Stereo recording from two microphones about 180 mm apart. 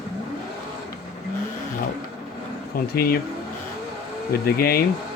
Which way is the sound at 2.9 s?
60° left (ahead or behind).